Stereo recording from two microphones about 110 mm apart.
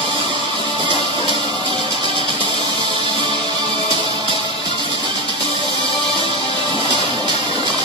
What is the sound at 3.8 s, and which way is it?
Music, 55° left (ahead or behind).